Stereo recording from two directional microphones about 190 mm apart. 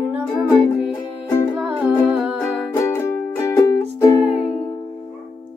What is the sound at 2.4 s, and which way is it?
Music, 15° left (ahead or behind).